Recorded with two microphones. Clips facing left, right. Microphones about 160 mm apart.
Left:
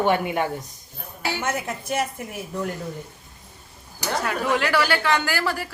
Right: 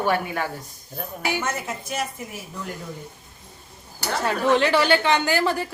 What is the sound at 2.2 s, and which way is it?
Speech, 60° left (ahead or behind).